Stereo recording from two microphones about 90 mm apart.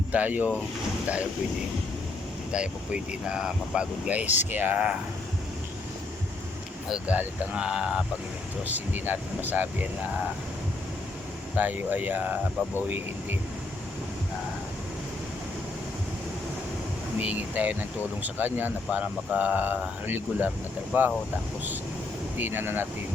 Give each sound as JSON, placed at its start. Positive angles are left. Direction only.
{"t": 0.1, "sound": "speech", "side_deg": -15}
{"t": 2.5, "sound": "speech", "side_deg": -10}
{"t": 7.1, "sound": "speech", "side_deg": -15}
{"t": 8.6, "sound": "speech", "side_deg": -20}
{"t": 11.5, "sound": "speech", "side_deg": -20}
{"t": 17.2, "sound": "speech", "side_deg": -20}
{"t": 22.4, "sound": "speech", "side_deg": -25}